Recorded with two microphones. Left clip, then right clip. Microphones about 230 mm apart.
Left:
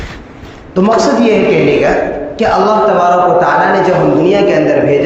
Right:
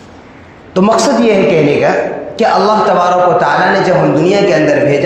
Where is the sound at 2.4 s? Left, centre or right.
Right.